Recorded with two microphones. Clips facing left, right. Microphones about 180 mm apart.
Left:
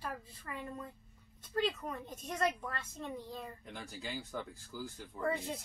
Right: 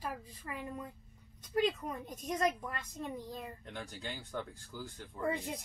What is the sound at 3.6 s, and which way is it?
Speech, centre (ahead or behind).